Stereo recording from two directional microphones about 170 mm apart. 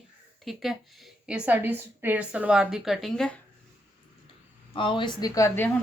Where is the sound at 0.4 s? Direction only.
Centre (ahead or behind).